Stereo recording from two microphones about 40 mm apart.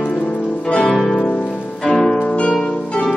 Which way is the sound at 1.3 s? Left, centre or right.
Left.